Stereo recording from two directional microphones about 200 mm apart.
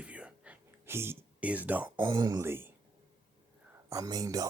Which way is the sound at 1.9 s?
20° right (ahead or behind).